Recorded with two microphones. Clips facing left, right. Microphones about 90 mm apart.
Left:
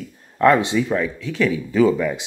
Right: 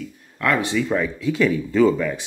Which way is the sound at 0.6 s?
20° left (ahead or behind).